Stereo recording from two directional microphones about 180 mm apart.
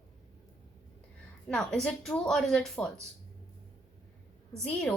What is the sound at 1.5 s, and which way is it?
Speech, 5° left (ahead or behind).